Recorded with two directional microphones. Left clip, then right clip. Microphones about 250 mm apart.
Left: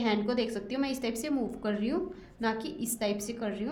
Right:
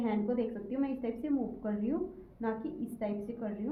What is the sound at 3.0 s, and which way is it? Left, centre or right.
Speech, left.